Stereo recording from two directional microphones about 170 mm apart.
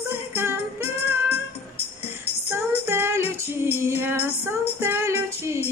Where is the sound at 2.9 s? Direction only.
15° right (ahead or behind).